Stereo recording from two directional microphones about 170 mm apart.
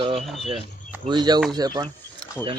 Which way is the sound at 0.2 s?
Centre (ahead or behind).